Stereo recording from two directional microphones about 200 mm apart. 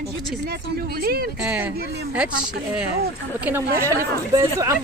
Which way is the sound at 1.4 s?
5° right (ahead or behind).